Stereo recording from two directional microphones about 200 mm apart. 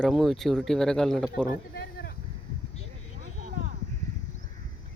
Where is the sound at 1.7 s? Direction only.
55° left (ahead or behind).